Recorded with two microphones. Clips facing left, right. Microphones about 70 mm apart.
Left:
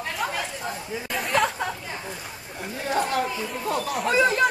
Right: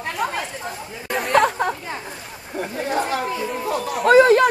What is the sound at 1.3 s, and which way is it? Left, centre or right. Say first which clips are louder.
Chatter: right 6 dB; right.